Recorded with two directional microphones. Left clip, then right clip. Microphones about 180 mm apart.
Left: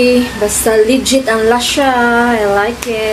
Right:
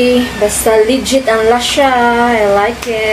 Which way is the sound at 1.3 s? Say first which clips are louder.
Right 3 dB; 15° left (ahead or behind).